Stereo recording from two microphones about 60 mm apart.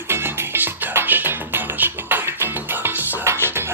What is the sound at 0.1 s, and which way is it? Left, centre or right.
Music, right.